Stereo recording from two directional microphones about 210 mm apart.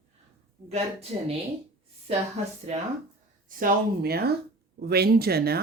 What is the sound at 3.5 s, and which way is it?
A woman's voice, 40° right (ahead or behind).